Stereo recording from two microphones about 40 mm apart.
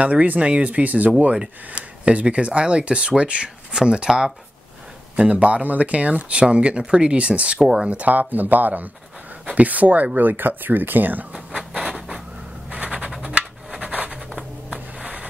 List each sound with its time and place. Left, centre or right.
0.0 s speech: right
3.4 s speech: centre
5.1 s speech: right
7.5 s speech: centre
7.9 s speech: right
10.1 s speech: right
11.8 s a sound: centre
12.7 s a sound: right